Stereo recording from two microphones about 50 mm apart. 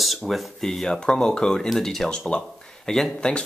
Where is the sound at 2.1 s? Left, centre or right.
Centre.